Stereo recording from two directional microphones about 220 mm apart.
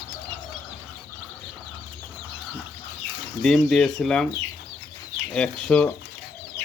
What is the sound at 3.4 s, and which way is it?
Speech, 5° left (ahead or behind).